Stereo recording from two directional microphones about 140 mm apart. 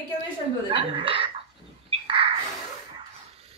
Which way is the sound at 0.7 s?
40° right (ahead or behind).